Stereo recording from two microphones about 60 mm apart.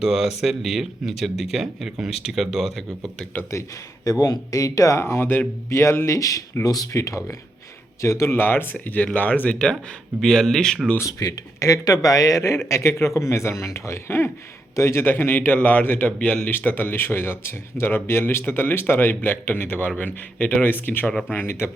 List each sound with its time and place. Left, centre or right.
0.0 s speech: centre
4.0 s speech: left
4.9 s speech: left
6.1 s speech: left
8.0 s speech: left
8.4 s speech: left; by 9.7 s centre
10.2 s speech: centre
11.0 s speech: left
12.6 s speech: left
16.1 s speech: centre
16.5 s speech: left
21.4 s speech: left